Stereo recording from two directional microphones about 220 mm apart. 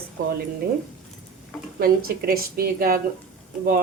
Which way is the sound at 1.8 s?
45° right (ahead or behind).